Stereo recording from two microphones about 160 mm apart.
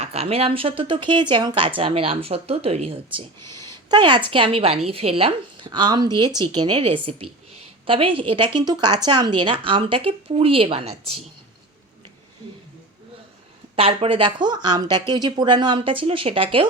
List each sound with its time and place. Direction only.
0.0 s speech: 40° right (ahead or behind)
3.5 s speech: 25° right (ahead or behind)
6.7 s a woman's voice: 40° right (ahead or behind)
13.7 s speech: 35° right (ahead or behind)